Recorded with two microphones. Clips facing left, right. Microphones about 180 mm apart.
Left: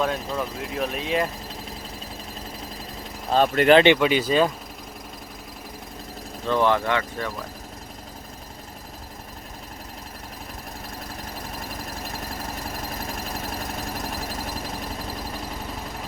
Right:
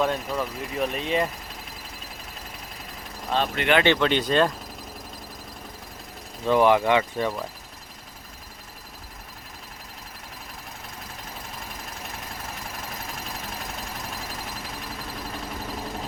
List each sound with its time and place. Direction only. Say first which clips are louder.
0.0 s speech: even; centre (ahead or behind)
3.2 s speech: left 7 dB; 45° left (ahead or behind)
3.8 s speech: left 3 dB; 10° left (ahead or behind)
6.5 s speech: right 3 dB; 15° right (ahead or behind)